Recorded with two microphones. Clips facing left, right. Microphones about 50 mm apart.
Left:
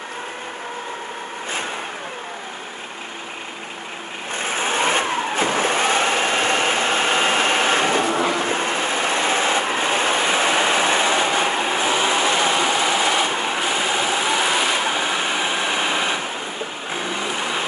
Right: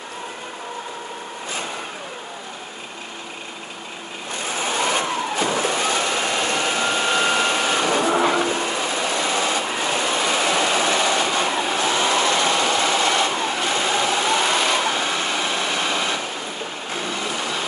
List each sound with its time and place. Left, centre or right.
4.3 s vehicle: left